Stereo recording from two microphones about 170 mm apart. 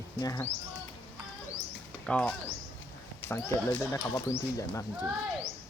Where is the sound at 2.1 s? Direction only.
5° left (ahead or behind).